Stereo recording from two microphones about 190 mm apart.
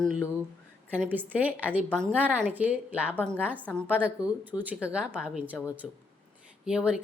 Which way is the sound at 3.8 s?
5° right (ahead or behind).